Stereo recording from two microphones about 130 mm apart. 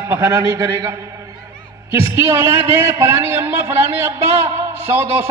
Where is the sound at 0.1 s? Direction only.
20° right (ahead or behind).